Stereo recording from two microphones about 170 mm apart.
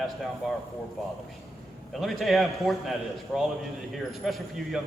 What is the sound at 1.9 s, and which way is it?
A man's voice, centre (ahead or behind).